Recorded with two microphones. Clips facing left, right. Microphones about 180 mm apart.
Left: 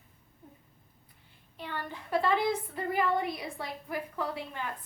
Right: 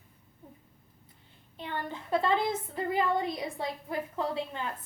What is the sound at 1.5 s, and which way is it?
A woman's voice, 25° right (ahead or behind).